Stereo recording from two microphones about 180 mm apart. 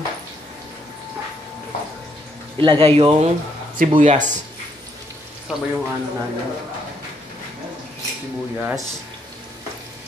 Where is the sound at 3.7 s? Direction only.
45° right (ahead or behind).